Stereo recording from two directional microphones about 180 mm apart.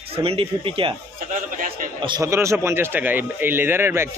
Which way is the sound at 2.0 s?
25° right (ahead or behind).